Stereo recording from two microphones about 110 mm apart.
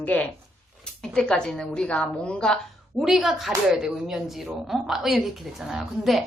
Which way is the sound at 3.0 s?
5° right (ahead or behind).